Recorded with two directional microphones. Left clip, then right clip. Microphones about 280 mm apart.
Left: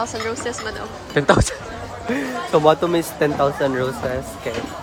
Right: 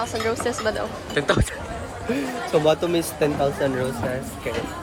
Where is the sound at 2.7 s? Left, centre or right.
Centre.